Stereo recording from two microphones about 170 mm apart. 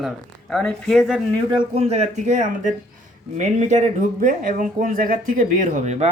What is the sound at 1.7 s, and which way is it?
Speech, 40° right (ahead or behind).